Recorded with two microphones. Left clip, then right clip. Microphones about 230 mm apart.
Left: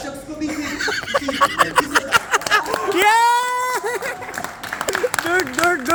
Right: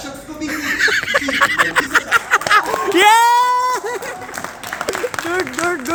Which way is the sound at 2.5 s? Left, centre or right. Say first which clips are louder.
Right 4 dB; right.